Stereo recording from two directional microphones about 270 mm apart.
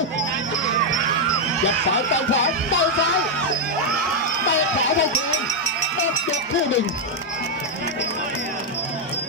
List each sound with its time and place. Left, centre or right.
2.1 s music: left
4.5 s speech: left